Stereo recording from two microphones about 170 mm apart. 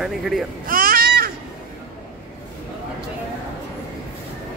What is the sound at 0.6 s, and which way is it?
Baby cry, 55° right (ahead or behind).